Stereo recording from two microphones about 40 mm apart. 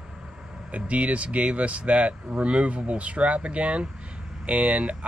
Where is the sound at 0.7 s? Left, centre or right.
Right.